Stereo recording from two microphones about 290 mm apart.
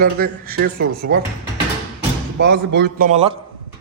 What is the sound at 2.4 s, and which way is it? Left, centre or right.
Speech, right.